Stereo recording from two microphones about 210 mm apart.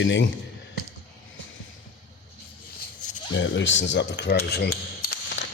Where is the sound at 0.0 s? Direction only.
60° left (ahead or behind).